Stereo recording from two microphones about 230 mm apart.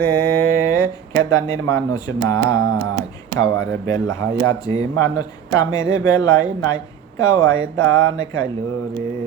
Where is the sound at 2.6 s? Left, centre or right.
Right.